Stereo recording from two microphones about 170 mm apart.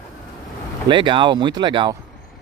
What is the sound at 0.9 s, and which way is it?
Speech, 30° right (ahead or behind).